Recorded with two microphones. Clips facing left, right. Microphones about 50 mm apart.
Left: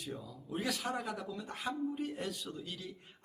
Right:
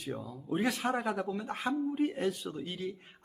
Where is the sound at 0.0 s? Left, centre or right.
Right.